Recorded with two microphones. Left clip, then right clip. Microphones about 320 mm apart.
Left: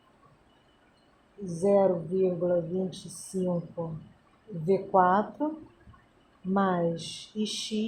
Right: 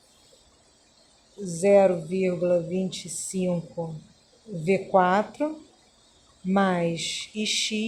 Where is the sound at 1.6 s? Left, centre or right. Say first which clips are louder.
Right 5 dB; right.